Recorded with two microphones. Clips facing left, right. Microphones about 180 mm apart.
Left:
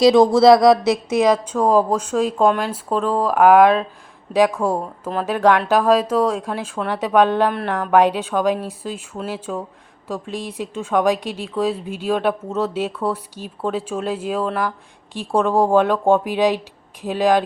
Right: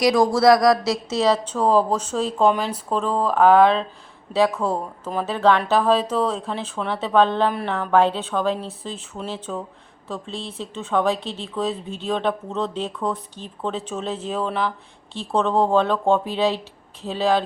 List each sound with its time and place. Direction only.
0.0 s speech: 20° left (ahead or behind)